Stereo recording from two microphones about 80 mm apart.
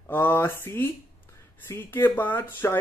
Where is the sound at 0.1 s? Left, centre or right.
Left.